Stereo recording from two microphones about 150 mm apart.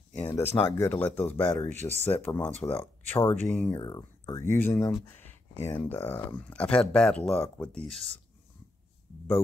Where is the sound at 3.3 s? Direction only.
10° left (ahead or behind).